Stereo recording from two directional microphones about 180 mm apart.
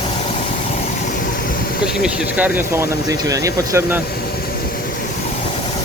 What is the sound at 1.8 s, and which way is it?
Speech, 5° right (ahead or behind).